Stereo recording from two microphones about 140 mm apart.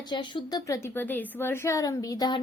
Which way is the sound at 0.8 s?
15° left (ahead or behind).